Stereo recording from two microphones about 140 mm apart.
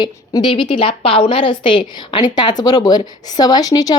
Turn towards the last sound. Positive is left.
turn(degrees=25)  # may be behind; listen again after turning